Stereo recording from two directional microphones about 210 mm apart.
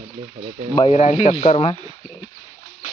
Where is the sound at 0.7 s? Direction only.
30° left (ahead or behind).